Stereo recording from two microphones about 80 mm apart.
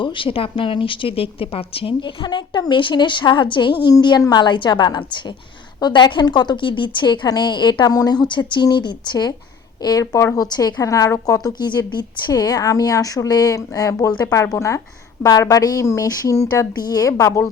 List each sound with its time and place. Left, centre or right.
0.0 s a woman's voice: left
8.6 s speech: left
10.0 s speech: left
10.4 s speech: left
12.3 s a woman's voice: left